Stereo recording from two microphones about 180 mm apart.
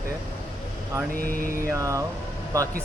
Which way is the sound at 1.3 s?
55° right (ahead or behind).